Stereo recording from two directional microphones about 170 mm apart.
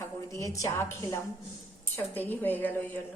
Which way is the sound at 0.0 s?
20° left (ahead or behind).